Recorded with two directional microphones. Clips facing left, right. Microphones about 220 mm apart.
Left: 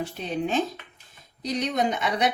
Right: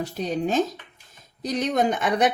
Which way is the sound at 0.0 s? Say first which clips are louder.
Right 3 dB; 40° right (ahead or behind).